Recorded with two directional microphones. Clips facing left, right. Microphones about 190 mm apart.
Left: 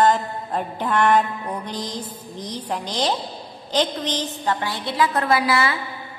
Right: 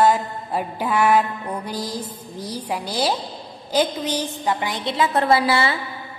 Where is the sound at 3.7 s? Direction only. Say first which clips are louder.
Right 2 dB; 10° right (ahead or behind).